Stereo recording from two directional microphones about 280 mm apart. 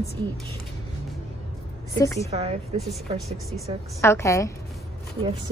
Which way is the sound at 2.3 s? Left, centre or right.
Right.